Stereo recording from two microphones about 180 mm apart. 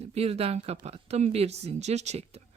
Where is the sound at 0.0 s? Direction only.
35° right (ahead or behind).